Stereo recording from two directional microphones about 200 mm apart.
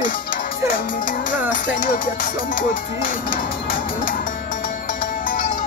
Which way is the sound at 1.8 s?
40° left (ahead or behind).